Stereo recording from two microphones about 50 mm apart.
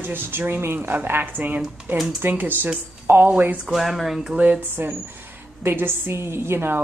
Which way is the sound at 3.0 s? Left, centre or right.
Right.